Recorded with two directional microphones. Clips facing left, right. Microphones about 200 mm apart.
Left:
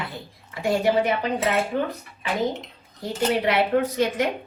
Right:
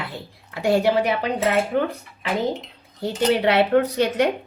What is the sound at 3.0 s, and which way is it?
Speech, 70° right (ahead or behind).